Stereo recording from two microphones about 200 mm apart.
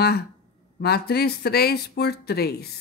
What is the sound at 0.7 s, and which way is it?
Speech, 55° left (ahead or behind).